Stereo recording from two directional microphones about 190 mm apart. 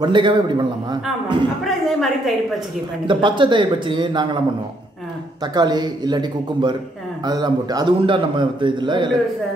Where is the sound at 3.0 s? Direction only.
25° right (ahead or behind).